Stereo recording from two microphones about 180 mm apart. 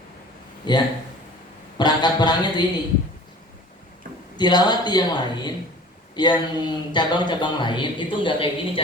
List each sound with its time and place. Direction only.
0.7 s a man's voice: 25° left (ahead or behind)
4.4 s a man's voice: 25° left (ahead or behind)